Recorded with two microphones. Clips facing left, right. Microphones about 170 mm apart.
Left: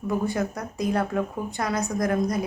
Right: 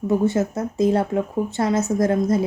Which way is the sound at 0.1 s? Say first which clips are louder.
Right 6 dB; 25° right (ahead or behind).